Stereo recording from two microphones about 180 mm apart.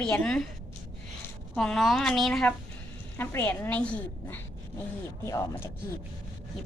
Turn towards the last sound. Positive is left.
turn(degrees=20)  # may be behind; listen again after turning